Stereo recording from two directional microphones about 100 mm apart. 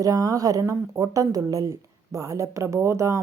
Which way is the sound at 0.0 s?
35° right (ahead or behind).